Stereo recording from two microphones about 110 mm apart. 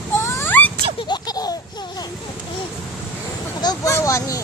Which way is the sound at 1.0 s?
40° left (ahead or behind).